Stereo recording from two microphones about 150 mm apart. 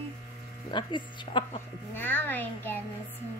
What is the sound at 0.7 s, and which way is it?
Speech, 30° left (ahead or behind).